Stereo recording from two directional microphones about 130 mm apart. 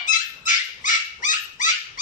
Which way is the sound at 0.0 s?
80° left.